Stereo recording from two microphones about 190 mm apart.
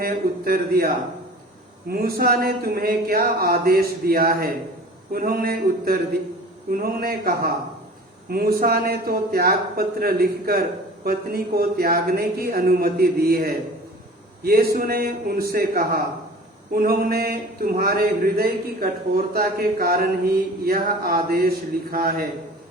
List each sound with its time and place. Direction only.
0.0 s a man's voice: 50° right (ahead or behind)